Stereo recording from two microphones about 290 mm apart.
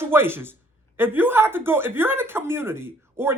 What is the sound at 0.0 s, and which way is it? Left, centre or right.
Speech, centre.